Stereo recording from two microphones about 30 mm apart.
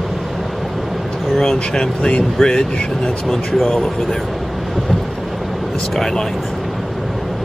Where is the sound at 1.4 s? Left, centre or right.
Left.